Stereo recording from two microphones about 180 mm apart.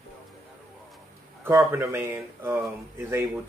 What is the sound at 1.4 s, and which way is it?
Speech, 10° right (ahead or behind).